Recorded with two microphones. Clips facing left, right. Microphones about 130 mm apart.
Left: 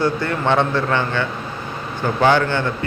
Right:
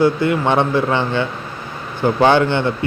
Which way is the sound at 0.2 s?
15° right (ahead or behind).